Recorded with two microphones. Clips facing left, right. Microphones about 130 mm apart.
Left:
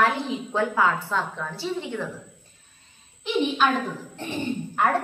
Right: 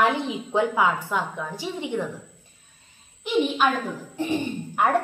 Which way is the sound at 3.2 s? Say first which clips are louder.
Right 1 dB; 10° right (ahead or behind).